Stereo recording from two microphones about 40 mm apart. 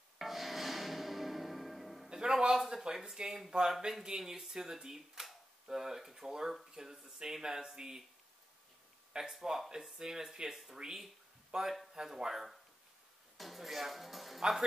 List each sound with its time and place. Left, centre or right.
0.2 s music: centre
2.0 s a man's voice: centre
9.1 s speech: centre
10.5 s speech: centre
11.5 s speech: centre